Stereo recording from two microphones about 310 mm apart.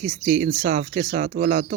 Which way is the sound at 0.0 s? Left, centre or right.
Right.